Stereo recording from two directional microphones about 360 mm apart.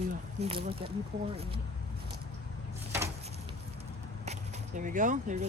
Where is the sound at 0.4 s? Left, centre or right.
Centre.